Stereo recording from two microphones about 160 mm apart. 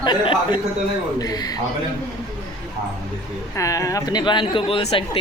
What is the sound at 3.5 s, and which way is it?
Speech, 20° left (ahead or behind).